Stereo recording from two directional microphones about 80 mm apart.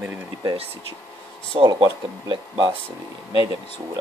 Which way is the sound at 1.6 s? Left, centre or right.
Right.